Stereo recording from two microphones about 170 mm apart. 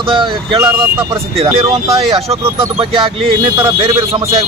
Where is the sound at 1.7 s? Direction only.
35° right (ahead or behind).